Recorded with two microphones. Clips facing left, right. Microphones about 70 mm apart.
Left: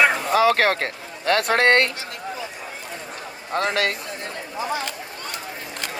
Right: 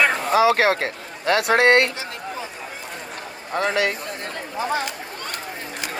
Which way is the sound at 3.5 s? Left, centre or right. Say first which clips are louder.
Right 1 dB; left.